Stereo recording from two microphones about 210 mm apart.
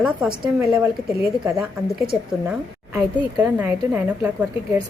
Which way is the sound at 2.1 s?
Centre (ahead or behind).